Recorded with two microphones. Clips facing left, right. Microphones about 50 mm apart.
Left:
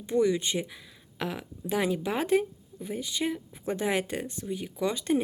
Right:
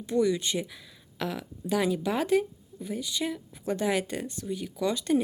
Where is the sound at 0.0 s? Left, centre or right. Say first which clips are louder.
Even; left.